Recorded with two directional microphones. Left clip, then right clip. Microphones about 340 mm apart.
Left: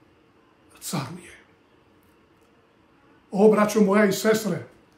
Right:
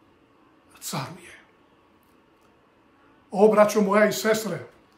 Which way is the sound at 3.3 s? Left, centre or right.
Centre.